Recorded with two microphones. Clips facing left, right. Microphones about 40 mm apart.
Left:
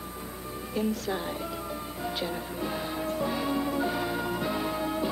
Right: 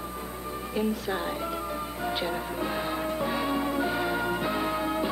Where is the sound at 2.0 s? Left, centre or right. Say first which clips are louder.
Right 2 dB; centre.